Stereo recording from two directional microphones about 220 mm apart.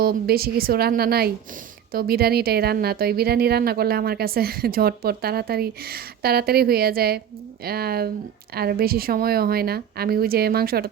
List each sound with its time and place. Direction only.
0.0 s a woman's voice: 45° right (ahead or behind)